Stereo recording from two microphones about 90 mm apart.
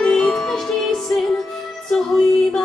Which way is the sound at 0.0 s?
5° left (ahead or behind).